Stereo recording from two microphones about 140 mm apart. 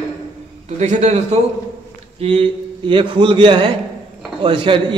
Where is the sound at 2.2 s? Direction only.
40° right (ahead or behind).